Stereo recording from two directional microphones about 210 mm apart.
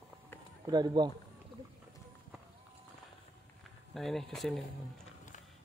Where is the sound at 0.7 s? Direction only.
20° right (ahead or behind).